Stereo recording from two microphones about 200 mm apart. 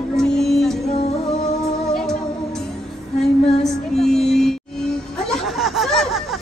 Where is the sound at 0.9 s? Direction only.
30° left (ahead or behind).